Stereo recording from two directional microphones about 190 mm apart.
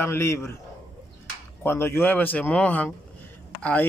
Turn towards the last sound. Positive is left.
turn(degrees=5)  # may be behind; listen again after turning